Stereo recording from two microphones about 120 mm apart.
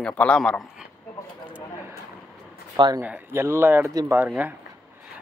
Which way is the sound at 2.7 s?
40° right (ahead or behind).